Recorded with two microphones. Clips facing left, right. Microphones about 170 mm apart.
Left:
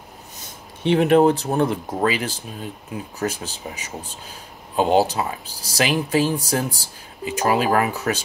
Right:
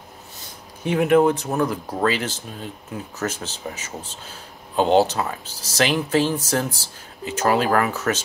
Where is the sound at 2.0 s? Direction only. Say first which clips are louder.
Even; 10° left (ahead or behind).